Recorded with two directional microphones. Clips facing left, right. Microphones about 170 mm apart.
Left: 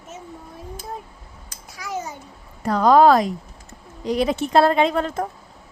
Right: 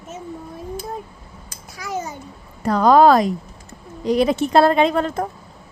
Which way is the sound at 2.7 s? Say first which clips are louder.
Right 1 dB; 45° right (ahead or behind).